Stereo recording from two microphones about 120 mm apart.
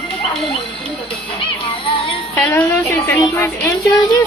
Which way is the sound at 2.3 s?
10° left (ahead or behind).